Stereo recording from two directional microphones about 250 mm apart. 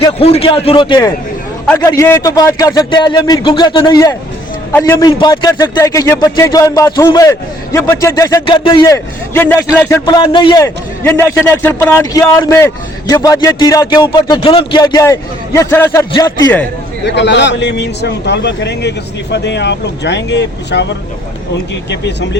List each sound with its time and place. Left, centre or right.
0.0 s a man's voice: left
17.1 s a man's voice: left